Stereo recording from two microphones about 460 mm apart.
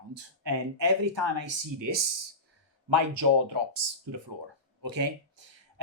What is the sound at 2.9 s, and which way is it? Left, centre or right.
Speech, right.